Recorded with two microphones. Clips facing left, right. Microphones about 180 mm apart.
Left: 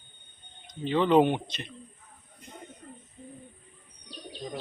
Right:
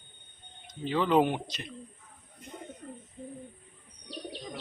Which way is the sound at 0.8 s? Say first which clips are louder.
Left 3 dB; 5° right (ahead or behind).